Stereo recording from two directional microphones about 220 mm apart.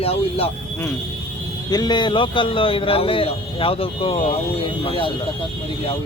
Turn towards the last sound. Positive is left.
turn(degrees=25)  # may be behind; listen again after turning